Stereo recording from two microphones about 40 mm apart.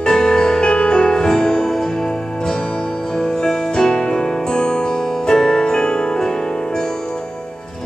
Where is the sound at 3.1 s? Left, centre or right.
Centre.